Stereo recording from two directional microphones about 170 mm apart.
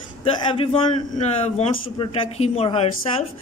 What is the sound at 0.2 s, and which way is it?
Speech, 30° left (ahead or behind).